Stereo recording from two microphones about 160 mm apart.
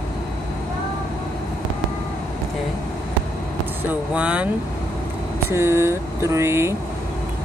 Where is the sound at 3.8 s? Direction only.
5° right (ahead or behind).